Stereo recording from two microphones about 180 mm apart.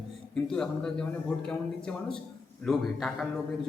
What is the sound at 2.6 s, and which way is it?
Speech, centre (ahead or behind).